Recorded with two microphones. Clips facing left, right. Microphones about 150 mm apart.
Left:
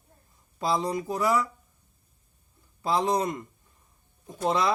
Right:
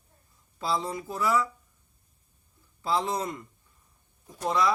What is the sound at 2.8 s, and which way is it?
Speech, 15° left (ahead or behind).